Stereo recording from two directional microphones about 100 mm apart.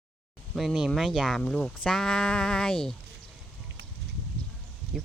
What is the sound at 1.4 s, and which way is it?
Speech, 10° left (ahead or behind).